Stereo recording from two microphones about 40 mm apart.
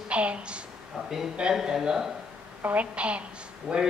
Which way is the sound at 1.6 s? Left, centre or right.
Centre.